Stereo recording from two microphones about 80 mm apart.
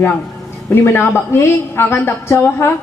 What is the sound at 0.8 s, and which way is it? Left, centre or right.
A woman's voice, left.